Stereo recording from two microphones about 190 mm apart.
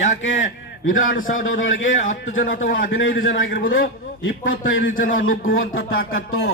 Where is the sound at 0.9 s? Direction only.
45° left (ahead or behind).